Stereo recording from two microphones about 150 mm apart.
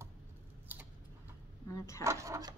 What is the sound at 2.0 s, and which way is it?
Speech, 20° right (ahead or behind).